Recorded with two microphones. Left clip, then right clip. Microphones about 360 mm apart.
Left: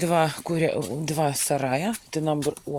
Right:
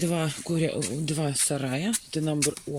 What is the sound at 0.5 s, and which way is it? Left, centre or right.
Speech, left.